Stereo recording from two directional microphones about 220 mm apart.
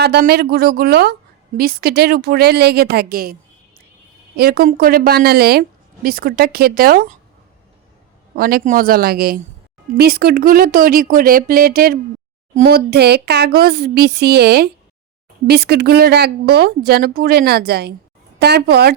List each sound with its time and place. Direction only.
0.0 s a woman's voice: 45° right (ahead or behind)
4.4 s a woman's voice: 45° right (ahead or behind)
8.4 s a woman's voice: 40° right (ahead or behind)